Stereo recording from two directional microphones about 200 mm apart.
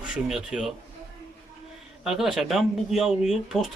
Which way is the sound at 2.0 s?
Centre (ahead or behind).